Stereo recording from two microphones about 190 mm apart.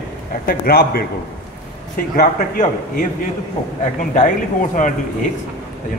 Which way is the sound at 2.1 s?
45° left (ahead or behind).